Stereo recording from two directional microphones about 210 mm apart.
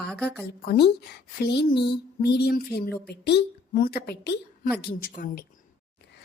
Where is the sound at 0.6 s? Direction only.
50° left (ahead or behind).